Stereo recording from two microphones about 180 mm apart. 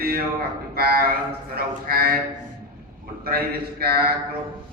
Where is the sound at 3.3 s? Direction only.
60° right (ahead or behind).